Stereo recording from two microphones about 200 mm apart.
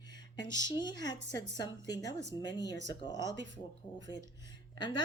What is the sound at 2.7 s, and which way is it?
Speech, 60° right (ahead or behind).